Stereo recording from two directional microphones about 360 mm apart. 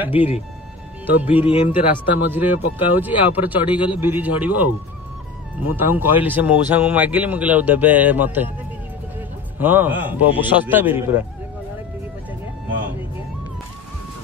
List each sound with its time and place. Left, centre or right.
0.1 s speech: centre
1.0 s speech: centre
1.4 s speech: centre
1.7 s speech: centre
5.9 s speech: centre
9.6 s speech: centre